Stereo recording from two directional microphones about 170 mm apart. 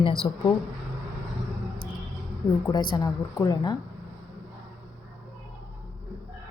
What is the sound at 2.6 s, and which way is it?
A woman's voice, 25° left (ahead or behind).